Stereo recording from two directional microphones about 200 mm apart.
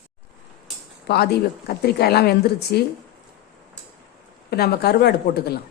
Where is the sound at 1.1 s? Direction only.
55° left (ahead or behind).